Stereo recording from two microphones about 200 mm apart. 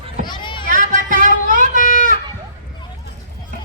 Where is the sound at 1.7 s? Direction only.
40° left (ahead or behind).